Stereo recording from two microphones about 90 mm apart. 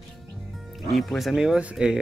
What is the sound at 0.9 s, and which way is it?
Speech, centre (ahead or behind).